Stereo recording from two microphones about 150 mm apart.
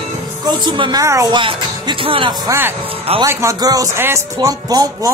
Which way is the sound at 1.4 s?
35° right (ahead or behind).